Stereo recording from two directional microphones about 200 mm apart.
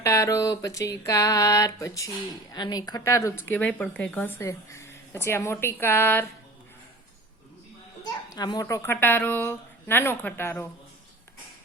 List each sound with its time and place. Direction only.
0.0 s a woman's voice: 15° left (ahead or behind)
8.3 s a woman's voice: 20° left (ahead or behind)